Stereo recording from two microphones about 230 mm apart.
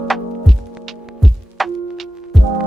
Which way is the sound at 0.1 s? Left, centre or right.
Centre.